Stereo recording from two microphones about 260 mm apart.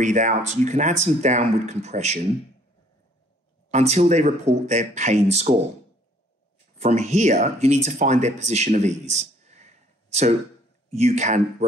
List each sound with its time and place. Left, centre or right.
0.0 s speech: right
3.7 s speech: right
6.8 s speech: right